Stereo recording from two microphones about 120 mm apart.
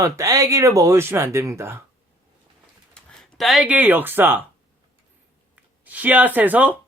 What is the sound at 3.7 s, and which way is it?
Speech, 15° right (ahead or behind).